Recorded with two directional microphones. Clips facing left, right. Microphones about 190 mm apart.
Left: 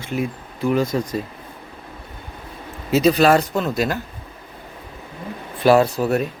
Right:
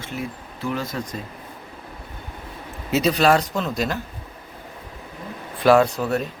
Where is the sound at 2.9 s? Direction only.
Centre (ahead or behind).